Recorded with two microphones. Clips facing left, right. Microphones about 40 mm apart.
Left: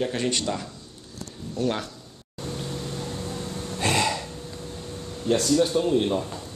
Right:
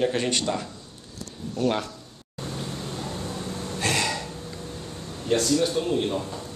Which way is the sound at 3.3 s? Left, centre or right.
Centre.